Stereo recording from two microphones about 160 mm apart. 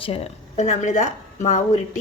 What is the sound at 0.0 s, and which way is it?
A woman's voice, 40° left (ahead or behind).